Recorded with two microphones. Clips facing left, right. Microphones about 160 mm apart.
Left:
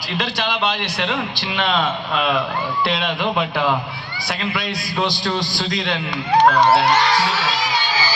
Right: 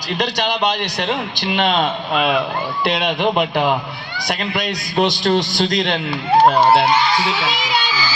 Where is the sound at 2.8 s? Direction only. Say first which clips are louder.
Right 3 dB; 20° right (ahead or behind).